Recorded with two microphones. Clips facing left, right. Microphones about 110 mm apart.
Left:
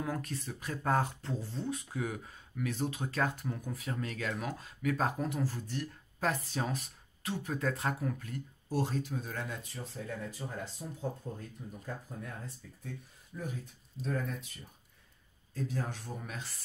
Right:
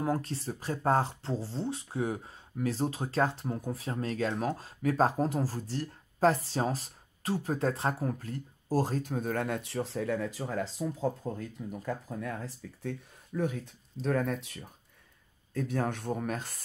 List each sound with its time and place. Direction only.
0.0 s speech: 30° right (ahead or behind); by 13.6 s 70° right (ahead or behind)
14.0 s speech: 80° right
15.5 s speech: 60° right (ahead or behind)